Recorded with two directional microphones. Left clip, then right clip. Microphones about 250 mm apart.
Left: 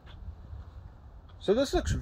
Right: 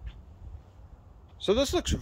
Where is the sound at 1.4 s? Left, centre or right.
Centre.